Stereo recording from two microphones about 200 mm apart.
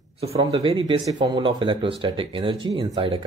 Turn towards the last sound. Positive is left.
turn(degrees=-25)  # may be behind; listen again after turning